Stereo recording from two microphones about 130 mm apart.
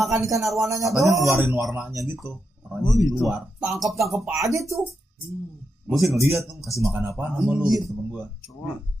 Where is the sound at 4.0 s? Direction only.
Centre (ahead or behind).